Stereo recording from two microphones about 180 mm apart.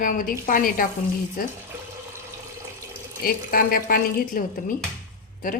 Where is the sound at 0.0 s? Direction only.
50° left (ahead or behind).